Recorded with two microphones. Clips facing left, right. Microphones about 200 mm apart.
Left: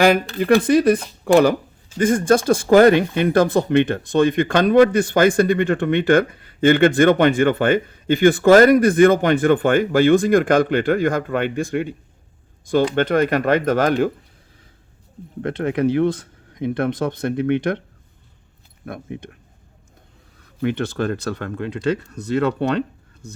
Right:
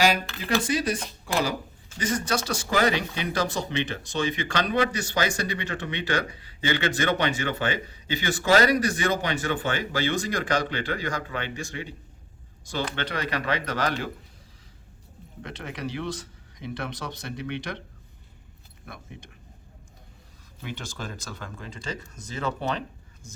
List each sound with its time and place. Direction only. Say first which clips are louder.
0.0 s speech: left 8 dB; 55° left (ahead or behind)
13.0 s speech: left 13 dB; 50° left (ahead or behind)
15.4 s speech: left 15 dB; 55° left (ahead or behind)
18.9 s speech: left 12 dB; 55° left (ahead or behind)
20.6 s speech: left 15 dB; 60° left (ahead or behind)